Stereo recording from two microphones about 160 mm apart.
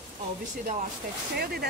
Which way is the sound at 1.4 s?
75° right (ahead or behind).